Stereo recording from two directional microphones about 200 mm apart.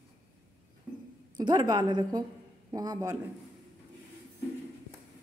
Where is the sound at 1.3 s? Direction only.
20° right (ahead or behind).